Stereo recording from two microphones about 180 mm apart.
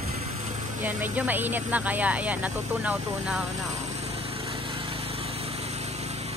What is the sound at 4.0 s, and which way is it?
Lawn mower, 30° right (ahead or behind).